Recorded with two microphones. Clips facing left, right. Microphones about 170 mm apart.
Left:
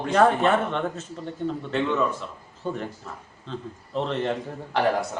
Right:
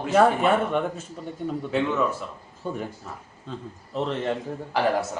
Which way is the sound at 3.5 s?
10° right (ahead or behind).